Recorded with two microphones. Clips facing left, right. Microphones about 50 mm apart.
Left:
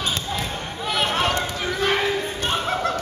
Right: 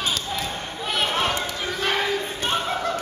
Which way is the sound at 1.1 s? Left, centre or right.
Centre.